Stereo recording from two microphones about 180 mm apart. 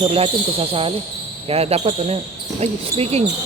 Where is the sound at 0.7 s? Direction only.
30° right (ahead or behind).